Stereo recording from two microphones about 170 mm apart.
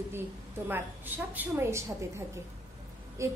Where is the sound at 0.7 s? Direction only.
10° right (ahead or behind).